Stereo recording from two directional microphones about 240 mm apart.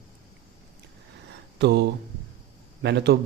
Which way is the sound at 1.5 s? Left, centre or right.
Right.